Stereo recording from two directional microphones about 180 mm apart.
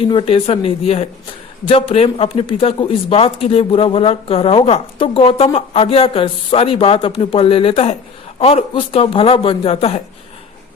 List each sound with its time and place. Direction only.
0.0 s speech: 30° left (ahead or behind)